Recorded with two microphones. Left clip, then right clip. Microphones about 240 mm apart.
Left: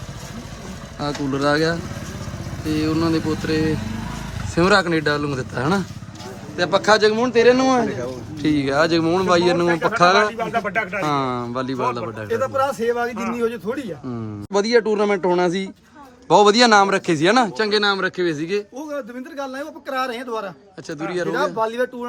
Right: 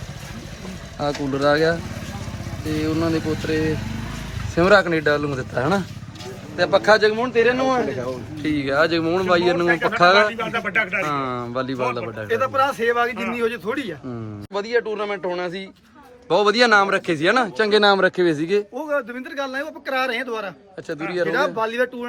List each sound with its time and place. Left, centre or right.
0.9 s speech: centre
2.8 s speech: centre
4.5 s speech: centre
10.3 s speech: left; by 13.9 s centre
14.5 s speech: left; by 17.7 s centre
17.7 s speech: centre
19.4 s speech: centre